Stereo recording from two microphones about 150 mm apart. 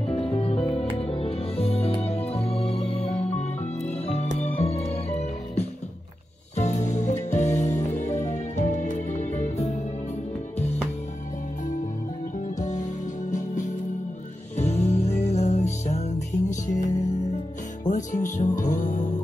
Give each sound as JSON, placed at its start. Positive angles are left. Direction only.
{"t": 0.3, "sound": "music", "side_deg": 40}
{"t": 6.5, "sound": "music", "side_deg": 50}
{"t": 12.5, "sound": "music", "side_deg": 55}
{"t": 14.6, "sound": "music", "side_deg": 45}
{"t": 17.8, "sound": "music", "side_deg": 55}